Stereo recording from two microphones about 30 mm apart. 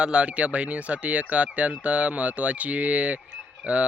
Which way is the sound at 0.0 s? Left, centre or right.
Right.